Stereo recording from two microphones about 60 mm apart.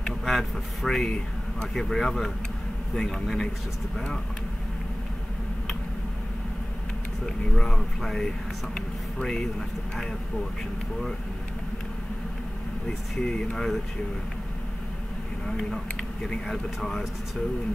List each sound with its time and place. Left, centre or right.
0.0 s speech: centre
7.5 s speech: centre
13.1 s speech: centre
15.5 s speech: centre